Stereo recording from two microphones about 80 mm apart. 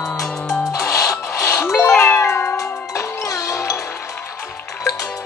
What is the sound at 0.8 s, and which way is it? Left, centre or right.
Music, left.